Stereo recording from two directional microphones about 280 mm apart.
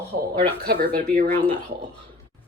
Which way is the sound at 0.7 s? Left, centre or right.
Right.